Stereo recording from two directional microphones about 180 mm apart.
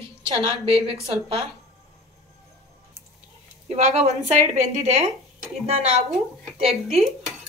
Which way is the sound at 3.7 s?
35° right (ahead or behind).